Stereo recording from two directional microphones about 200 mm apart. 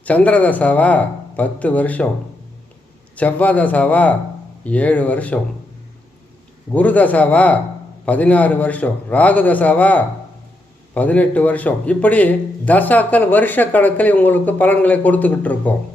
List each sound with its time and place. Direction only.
0.0 s a man's voice: 5° left (ahead or behind)
3.2 s a man's voice: 5° left (ahead or behind)
6.7 s a man's voice: 5° left (ahead or behind)